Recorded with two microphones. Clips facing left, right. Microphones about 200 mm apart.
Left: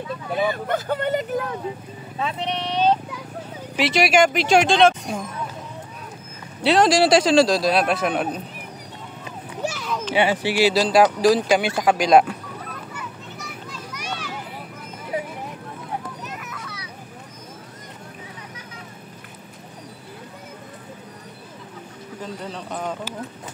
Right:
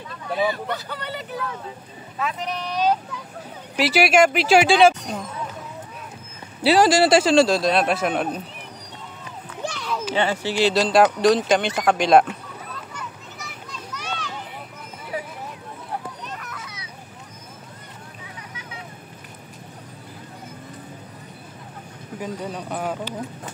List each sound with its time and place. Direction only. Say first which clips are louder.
0.5 s speech: left 4 dB; 50° left (ahead or behind)
2.1 s speech: left 1 dB; 30° left (ahead or behind)
3.7 s speech: right 1 dB; centre (ahead or behind)
6.6 s speech: even; 5° right (ahead or behind)
9.6 s a sound: left 2 dB; 5° left (ahead or behind)
10.1 s speech: left 3 dB; 15° left (ahead or behind)
13.7 s children playing: right 1 dB; 10° left (ahead or behind)
16.3 s children playing: left 1 dB; 5° left (ahead or behind)
16.6 s a sound: left 3 dB; 20° right (ahead or behind)
22.2 s speech: right 3 dB; 10° right (ahead or behind)